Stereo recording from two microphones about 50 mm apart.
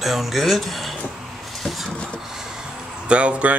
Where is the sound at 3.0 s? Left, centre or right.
Right.